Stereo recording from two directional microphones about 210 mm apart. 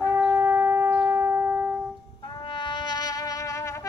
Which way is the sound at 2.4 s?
20° left (ahead or behind).